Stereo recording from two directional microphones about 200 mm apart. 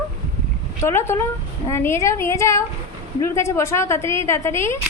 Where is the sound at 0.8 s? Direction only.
15° left (ahead or behind).